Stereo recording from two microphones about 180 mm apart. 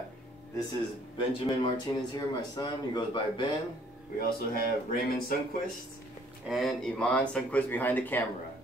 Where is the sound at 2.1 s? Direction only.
25° left (ahead or behind).